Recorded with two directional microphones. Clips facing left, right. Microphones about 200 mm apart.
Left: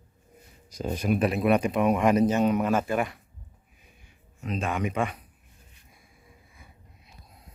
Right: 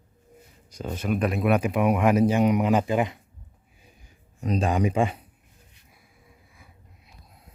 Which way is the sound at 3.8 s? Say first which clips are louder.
Right 3 dB; 35° right (ahead or behind).